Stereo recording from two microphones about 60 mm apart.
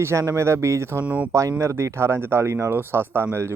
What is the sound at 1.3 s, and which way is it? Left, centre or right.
Speech, right.